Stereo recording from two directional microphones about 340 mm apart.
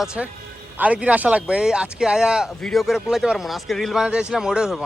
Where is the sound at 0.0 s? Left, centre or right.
Centre.